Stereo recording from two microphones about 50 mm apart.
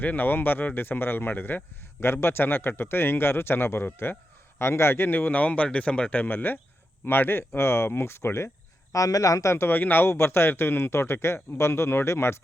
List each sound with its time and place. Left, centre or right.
0.0 s speech: left
4.5 s speech: left
5.0 s speech: left
8.9 s a man's voice: left
9.4 s speech: left
9.6 s speech: left